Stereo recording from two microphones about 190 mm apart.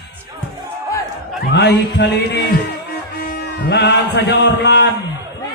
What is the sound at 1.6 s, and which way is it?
A man's voice, 65° left (ahead or behind).